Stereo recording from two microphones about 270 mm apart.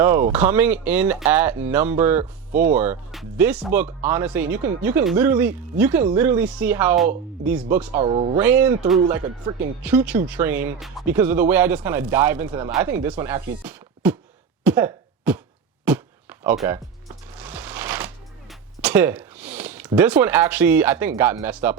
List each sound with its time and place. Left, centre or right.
0.0 s speech: centre
7.9 s speech: right
8.4 s speech: centre
13.7 s a sound: centre
14.6 s cough: centre
15.9 s a sound: centre
16.4 s shuffling cards: centre
18.8 s a sound: centre
19.9 s speech: centre